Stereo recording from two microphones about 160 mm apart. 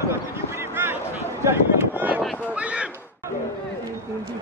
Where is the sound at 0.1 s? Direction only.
15° right (ahead or behind).